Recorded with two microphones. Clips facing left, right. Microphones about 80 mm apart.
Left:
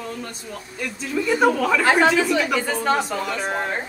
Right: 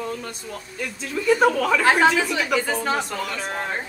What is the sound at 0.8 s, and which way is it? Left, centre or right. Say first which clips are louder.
A woman's voice: left 1 dB; centre.